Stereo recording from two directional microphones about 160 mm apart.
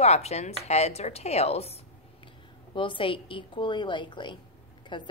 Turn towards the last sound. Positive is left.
turn(degrees=30)  # may be behind; listen again after turning